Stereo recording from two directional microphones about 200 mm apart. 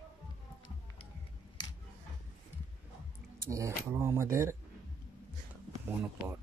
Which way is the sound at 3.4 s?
15° right (ahead or behind).